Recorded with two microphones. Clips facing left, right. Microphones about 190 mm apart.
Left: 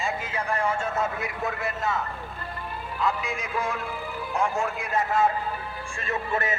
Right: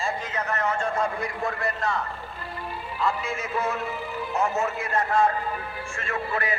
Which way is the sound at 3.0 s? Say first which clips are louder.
Even; centre (ahead or behind).